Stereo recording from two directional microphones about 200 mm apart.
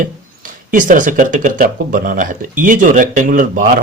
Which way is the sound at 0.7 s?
40° right (ahead or behind).